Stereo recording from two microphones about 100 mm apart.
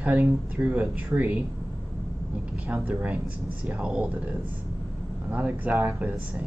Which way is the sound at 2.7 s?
15° right (ahead or behind).